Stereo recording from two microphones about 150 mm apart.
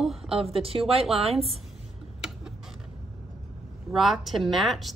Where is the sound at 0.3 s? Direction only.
40° right (ahead or behind).